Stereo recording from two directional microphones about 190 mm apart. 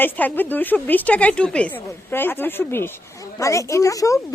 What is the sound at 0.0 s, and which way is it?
A woman's voice, 10° left (ahead or behind).